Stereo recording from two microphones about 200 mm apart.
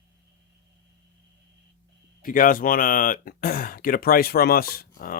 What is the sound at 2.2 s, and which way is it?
Speech, 45° left (ahead or behind).